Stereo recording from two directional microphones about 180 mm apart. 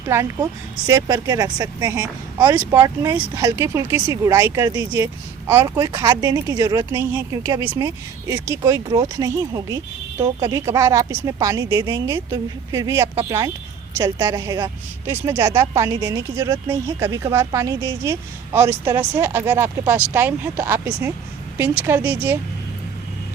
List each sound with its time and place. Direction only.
0.1 s a woman's voice: 15° right (ahead or behind)